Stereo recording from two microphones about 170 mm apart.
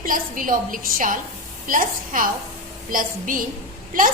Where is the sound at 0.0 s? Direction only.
55° right (ahead or behind).